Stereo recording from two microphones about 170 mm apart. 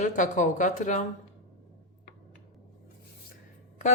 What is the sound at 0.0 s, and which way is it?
Speech, 50° left (ahead or behind).